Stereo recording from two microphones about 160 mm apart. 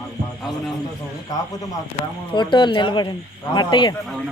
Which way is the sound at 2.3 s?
30° left (ahead or behind).